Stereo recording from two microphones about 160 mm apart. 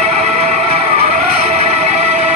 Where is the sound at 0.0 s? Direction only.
45° right (ahead or behind).